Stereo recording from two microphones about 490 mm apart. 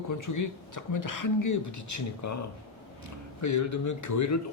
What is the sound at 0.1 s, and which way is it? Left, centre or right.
Speech, left.